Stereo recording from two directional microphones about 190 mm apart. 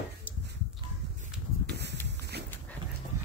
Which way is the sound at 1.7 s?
65° right (ahead or behind).